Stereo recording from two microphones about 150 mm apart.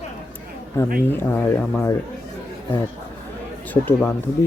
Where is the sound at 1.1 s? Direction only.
15° left (ahead or behind).